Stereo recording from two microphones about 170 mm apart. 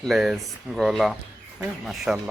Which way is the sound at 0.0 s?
Centre (ahead or behind).